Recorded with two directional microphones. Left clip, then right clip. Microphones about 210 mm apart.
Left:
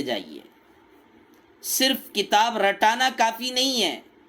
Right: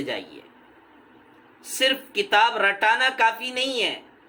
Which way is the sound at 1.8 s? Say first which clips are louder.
Right 1 dB; 45° left (ahead or behind).